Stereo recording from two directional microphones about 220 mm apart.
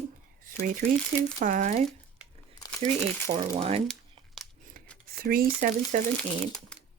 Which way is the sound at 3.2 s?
25° right (ahead or behind).